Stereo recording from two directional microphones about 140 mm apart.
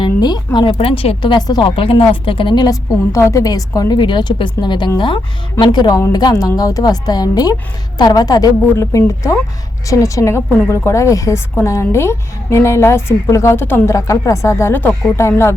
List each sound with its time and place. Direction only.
0.0 s a woman's voice: 30° left (ahead or behind)